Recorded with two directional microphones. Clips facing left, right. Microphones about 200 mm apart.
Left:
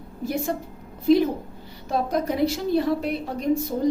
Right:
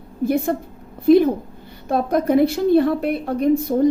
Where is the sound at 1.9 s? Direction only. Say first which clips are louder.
Right 7 dB; 55° right (ahead or behind).